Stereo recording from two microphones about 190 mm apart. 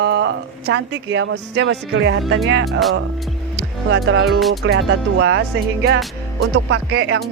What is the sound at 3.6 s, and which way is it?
Music, 75° right (ahead or behind).